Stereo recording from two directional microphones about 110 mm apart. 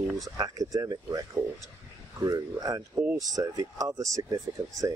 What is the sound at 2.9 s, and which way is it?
Speech, 20° right (ahead or behind).